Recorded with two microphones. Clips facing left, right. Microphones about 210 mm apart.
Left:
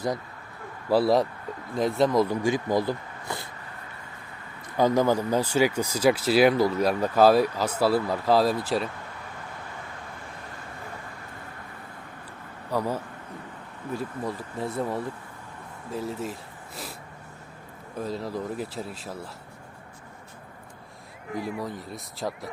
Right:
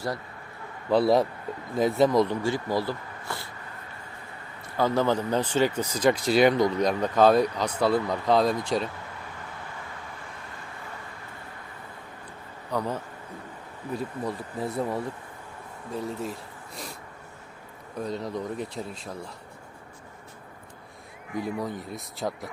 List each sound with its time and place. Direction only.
0.9 s speech: centre (ahead or behind)
2.3 s speech: 15° left (ahead or behind)
4.8 s speech: 15° left (ahead or behind)
12.7 s speech: 10° left (ahead or behind)
17.9 s speech: centre (ahead or behind)
21.6 s speech: centre (ahead or behind)